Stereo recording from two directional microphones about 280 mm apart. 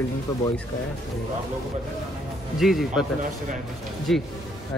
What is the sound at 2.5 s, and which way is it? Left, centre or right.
Speech, centre.